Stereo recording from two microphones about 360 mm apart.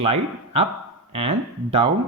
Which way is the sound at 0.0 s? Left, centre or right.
Centre.